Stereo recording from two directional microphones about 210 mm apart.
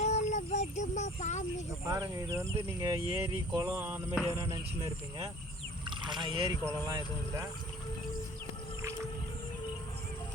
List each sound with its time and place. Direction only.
0.0 s a sound: 35° left (ahead or behind)
1.9 s speech: 20° right (ahead or behind)
5.8 s speech: 20° right (ahead or behind)